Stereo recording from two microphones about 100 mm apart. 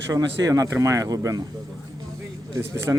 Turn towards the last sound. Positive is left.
turn(degrees=-25)  # may be behind; listen again after turning